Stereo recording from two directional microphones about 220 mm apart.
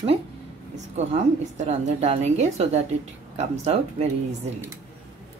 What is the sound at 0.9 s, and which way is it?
A woman's voice, 30° right (ahead or behind).